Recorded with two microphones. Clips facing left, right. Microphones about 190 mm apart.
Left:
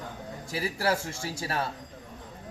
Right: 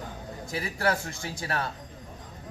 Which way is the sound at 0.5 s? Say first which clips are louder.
Even; 30° left (ahead or behind).